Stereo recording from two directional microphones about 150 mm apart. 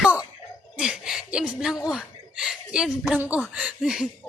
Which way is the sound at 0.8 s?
5° right (ahead or behind).